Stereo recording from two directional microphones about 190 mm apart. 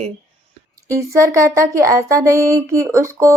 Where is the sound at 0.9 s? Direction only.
15° right (ahead or behind).